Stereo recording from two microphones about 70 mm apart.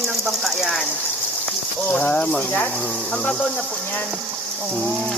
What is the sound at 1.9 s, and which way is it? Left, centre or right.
Speech, left.